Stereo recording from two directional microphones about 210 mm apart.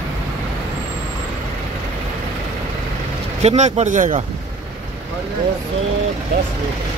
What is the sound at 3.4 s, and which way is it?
Speech, 30° right (ahead or behind).